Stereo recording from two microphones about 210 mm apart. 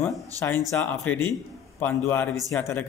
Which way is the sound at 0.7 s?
10° left (ahead or behind).